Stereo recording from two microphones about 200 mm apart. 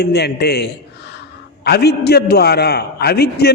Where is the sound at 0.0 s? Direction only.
55° left (ahead or behind).